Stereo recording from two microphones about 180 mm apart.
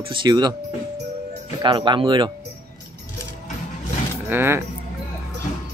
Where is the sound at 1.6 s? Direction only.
25° right (ahead or behind).